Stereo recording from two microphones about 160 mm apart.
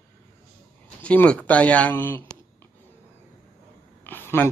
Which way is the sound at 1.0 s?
10° left (ahead or behind).